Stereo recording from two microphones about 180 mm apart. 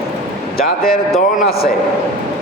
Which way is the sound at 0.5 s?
55° left (ahead or behind).